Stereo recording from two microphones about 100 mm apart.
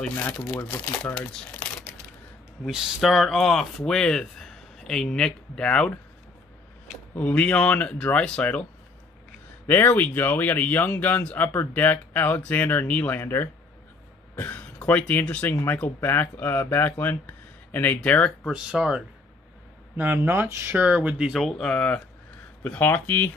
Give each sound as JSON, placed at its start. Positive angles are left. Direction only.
{"t": 0.4, "sound": "speech", "side_deg": 35}
{"t": 0.7, "sound": "speech", "side_deg": 20}
{"t": 2.6, "sound": "speech", "side_deg": 0}
{"t": 7.2, "sound": "speech", "side_deg": 15}
{"t": 9.7, "sound": "speech", "side_deg": 20}
{"t": 18.5, "sound": "speech", "side_deg": -10}
{"t": 20.0, "sound": "speech", "side_deg": -20}